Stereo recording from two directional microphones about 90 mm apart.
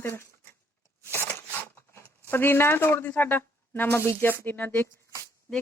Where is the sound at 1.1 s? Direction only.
20° left (ahead or behind).